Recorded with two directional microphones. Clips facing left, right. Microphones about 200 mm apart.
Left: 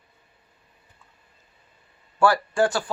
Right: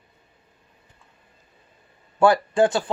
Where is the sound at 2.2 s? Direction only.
20° right (ahead or behind).